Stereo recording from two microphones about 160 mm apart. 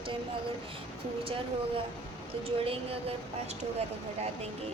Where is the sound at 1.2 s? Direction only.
35° right (ahead or behind).